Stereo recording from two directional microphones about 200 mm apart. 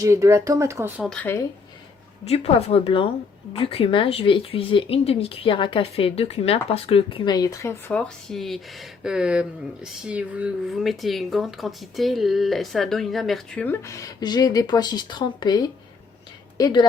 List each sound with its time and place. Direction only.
0.0 s speech: 15° right (ahead or behind)
1.0 s speech: 5° left (ahead or behind)
2.2 s speech: 30° left (ahead or behind)